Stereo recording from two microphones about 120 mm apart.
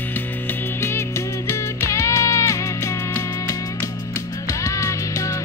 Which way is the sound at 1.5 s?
25° left (ahead or behind).